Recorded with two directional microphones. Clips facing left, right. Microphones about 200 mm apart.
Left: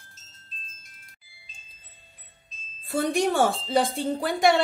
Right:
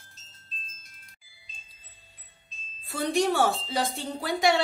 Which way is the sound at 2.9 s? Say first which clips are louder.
Left 2 dB; 50° left (ahead or behind).